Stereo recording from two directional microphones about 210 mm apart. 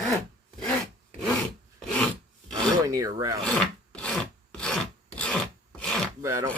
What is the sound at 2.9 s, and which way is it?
Speech, 15° right (ahead or behind).